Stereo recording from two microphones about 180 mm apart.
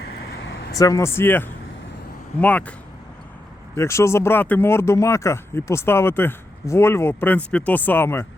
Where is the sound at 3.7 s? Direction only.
15° left (ahead or behind).